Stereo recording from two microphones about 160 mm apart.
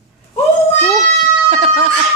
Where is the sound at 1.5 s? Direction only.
35° right (ahead or behind).